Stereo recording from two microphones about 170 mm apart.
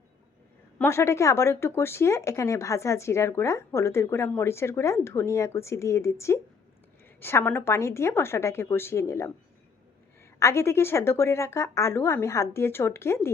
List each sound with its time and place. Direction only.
0.8 s speech: 15° left (ahead or behind)
10.4 s speech: 15° left (ahead or behind)